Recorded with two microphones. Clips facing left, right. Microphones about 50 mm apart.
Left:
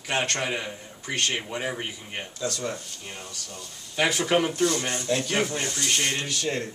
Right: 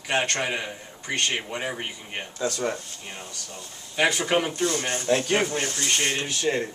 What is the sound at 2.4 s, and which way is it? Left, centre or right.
Speech, right.